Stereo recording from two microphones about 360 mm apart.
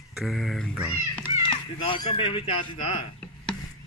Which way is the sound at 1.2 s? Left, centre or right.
Centre.